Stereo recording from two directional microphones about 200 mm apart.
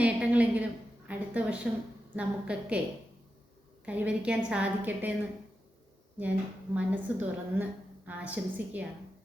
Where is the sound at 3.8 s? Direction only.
5° right (ahead or behind).